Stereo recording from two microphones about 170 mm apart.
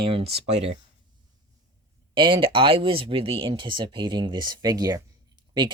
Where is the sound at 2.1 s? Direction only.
30° right (ahead or behind).